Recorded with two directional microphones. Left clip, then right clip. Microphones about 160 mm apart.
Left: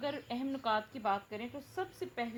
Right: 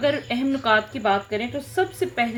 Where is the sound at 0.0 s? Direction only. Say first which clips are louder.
Right 16 dB; 30° left (ahead or behind).